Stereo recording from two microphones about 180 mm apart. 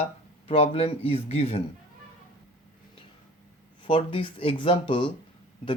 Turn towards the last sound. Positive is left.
turn(degrees=30)  # may be behind; listen again after turning